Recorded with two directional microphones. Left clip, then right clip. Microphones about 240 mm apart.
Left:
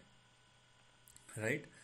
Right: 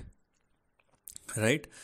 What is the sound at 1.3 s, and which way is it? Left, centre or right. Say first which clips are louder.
Speech: right 10 dB; right.